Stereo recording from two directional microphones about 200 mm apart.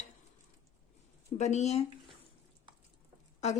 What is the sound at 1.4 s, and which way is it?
Speech, 35° left (ahead or behind).